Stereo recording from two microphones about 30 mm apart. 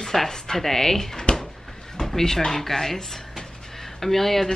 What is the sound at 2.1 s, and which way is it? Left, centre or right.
A woman's voice, centre.